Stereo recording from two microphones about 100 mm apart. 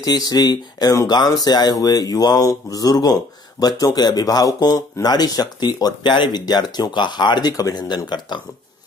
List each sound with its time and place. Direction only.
0.0 s speech: 40° left (ahead or behind)